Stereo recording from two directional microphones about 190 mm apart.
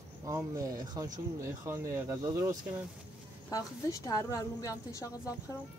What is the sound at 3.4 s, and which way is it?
A woman's voice, 20° left (ahead or behind).